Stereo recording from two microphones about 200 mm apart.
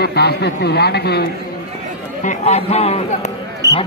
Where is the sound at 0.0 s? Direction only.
55° left (ahead or behind).